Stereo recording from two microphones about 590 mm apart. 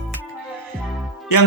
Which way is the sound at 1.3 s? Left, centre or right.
Left.